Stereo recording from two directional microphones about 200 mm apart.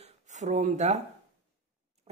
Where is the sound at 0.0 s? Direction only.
35° right (ahead or behind).